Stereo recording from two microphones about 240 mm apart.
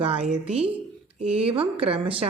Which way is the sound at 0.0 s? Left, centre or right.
Right.